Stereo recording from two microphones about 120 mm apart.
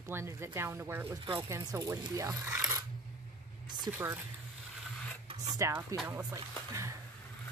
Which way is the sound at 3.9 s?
30° right (ahead or behind).